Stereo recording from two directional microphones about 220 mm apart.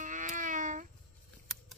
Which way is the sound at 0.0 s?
35° right (ahead or behind).